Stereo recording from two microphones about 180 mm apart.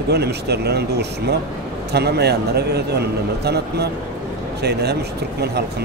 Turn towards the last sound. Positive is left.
turn(degrees=-65)  # may be behind; listen again after turning